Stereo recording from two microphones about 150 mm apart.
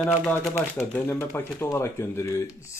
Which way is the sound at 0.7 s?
15° left (ahead or behind).